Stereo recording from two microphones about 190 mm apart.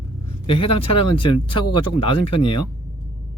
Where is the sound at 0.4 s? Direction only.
30° left (ahead or behind).